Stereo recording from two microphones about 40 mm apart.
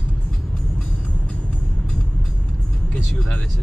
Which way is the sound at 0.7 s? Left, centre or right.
Left.